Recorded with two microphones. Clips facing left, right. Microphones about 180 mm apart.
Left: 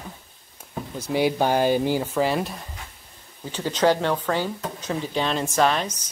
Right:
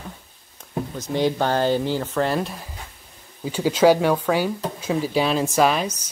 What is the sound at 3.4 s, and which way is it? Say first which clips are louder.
Speech: right 5 dB; 10° right (ahead or behind).